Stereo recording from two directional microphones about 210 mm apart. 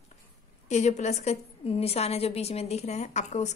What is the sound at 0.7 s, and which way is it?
A woman's voice, 35° left (ahead or behind).